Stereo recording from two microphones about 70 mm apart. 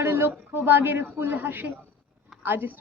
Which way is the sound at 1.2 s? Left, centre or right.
Right.